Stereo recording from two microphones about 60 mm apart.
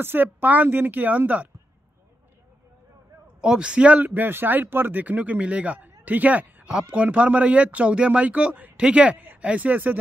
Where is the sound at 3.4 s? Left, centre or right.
Centre.